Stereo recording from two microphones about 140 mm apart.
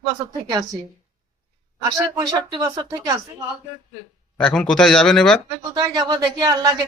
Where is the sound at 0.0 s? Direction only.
30° right (ahead or behind).